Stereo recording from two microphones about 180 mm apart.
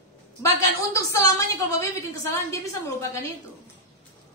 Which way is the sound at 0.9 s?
15° left (ahead or behind).